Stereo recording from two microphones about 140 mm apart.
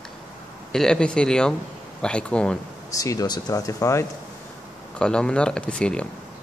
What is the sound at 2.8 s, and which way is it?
Speech, 25° left (ahead or behind).